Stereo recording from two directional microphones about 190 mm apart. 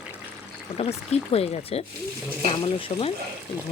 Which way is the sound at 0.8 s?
35° left (ahead or behind).